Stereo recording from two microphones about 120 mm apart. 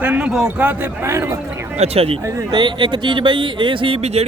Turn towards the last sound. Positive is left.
turn(degrees=-55)  # may be behind; listen again after turning